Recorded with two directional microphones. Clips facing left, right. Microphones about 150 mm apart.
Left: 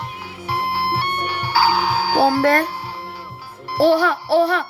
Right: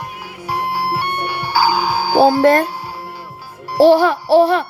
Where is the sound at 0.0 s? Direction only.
10° right (ahead or behind).